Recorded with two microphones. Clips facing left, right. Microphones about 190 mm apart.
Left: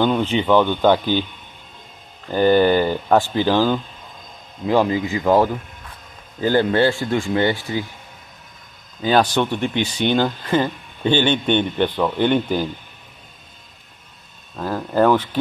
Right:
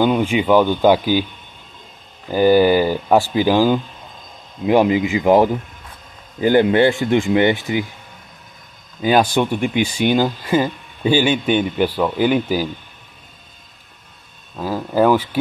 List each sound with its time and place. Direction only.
0.0 s speech: 10° right (ahead or behind)
2.2 s speech: 10° right (ahead or behind)
9.0 s speech: 10° right (ahead or behind)
14.6 s speech: 5° right (ahead or behind)